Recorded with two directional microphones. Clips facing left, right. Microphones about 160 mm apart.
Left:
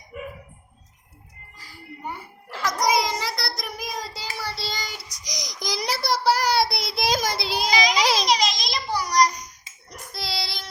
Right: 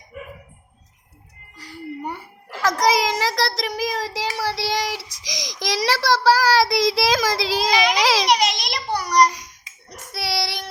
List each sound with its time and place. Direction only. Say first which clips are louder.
2.6 s child singing: right 3 dB; 90° right; by 10.7 s 70° right (ahead or behind)